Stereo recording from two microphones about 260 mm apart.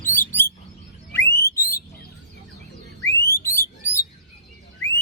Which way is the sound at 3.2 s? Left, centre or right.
Centre.